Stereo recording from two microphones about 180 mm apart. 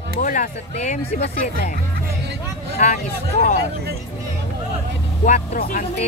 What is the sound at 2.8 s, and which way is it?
Speech, 40° left (ahead or behind).